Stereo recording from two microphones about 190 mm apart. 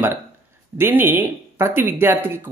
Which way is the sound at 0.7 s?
10° right (ahead or behind).